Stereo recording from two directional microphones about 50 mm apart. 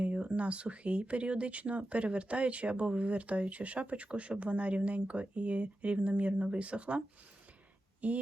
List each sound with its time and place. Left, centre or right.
0.0 s speech: right
8.0 s speech: right